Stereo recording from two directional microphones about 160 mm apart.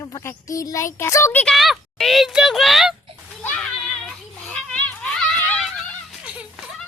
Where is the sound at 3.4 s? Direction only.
5° left (ahead or behind).